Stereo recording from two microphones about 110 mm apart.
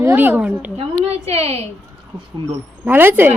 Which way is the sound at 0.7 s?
65° right (ahead or behind).